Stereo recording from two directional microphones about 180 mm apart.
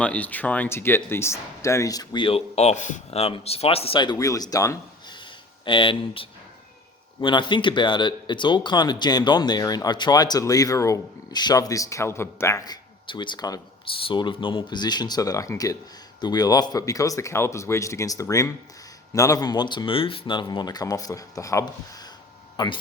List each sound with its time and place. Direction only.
0.0 s speech: 10° left (ahead or behind); by 22.8 s 25° left (ahead or behind)